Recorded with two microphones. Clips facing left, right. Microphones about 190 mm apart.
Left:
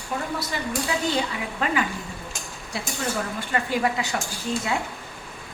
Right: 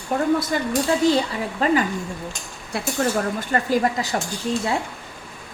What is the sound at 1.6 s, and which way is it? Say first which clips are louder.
Speech: right 7 dB; 35° right (ahead or behind).